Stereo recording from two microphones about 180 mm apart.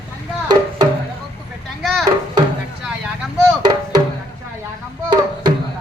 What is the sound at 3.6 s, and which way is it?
Music, 25° right (ahead or behind).